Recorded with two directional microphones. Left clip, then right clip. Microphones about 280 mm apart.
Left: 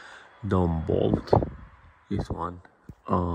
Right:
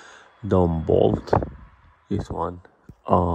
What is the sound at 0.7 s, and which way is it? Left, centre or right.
Speech, centre.